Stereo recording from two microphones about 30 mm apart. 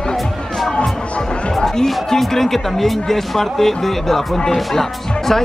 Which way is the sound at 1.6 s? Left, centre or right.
Centre.